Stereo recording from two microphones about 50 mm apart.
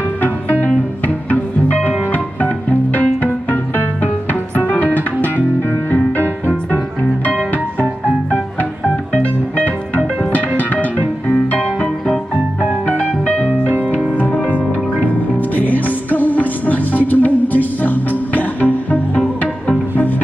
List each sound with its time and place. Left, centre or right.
1.0 s music: left
7.5 s music: left
10.6 s music: left
13.2 s music: left